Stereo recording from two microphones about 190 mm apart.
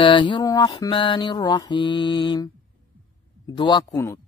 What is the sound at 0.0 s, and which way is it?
Mantra, 25° left (ahead or behind).